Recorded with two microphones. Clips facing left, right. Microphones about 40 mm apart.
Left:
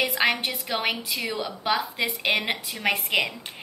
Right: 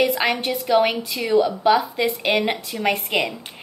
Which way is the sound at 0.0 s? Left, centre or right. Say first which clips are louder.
Right 4 dB; centre.